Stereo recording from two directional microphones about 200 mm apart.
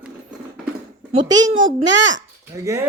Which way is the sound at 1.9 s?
65° right (ahead or behind).